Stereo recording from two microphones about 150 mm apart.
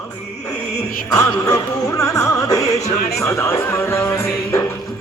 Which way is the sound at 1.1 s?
25° left (ahead or behind).